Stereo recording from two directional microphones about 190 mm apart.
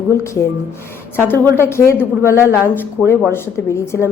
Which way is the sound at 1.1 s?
10° left (ahead or behind).